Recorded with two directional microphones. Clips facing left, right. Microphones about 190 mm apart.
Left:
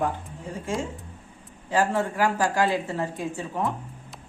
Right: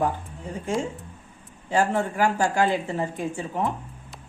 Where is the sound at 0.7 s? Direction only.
Centre (ahead or behind).